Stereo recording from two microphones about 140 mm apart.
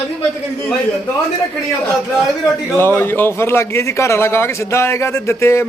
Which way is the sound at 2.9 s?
15° left (ahead or behind).